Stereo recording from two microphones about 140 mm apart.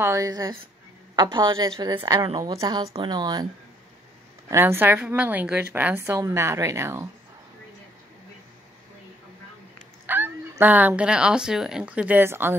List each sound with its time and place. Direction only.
0.0 s a woman's voice: 20° right (ahead or behind)
4.5 s a woman's voice: 20° right (ahead or behind)
10.0 s a woman's voice: 15° right (ahead or behind)